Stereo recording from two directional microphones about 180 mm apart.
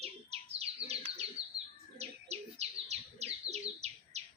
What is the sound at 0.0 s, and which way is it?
Bird, 35° right (ahead or behind).